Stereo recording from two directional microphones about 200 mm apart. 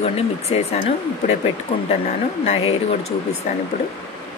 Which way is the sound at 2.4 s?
30° left (ahead or behind).